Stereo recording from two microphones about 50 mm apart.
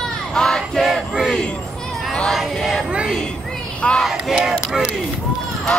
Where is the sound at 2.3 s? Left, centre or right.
Centre.